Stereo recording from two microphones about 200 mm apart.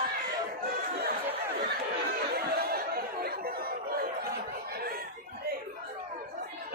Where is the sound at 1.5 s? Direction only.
50° right (ahead or behind).